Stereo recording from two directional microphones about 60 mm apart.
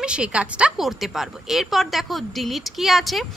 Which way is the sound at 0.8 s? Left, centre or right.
Centre.